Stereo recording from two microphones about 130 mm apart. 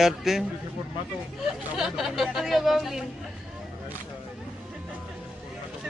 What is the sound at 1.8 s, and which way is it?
Speech, centre (ahead or behind).